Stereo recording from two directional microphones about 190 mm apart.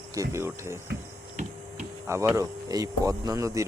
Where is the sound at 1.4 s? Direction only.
35° right (ahead or behind).